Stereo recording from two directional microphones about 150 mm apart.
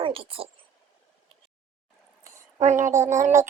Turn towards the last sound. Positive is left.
turn(degrees=-20)  # may be behind; listen again after turning